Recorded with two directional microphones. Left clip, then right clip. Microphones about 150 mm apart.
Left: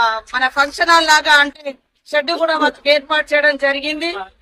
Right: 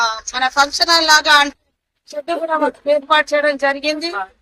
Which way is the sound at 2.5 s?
Centre (ahead or behind).